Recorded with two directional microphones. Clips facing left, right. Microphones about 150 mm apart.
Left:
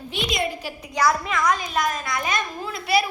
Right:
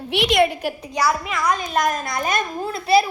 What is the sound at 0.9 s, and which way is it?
Speech, 10° right (ahead or behind).